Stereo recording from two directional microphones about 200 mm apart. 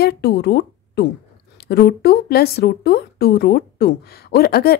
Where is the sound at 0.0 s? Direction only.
55° left (ahead or behind).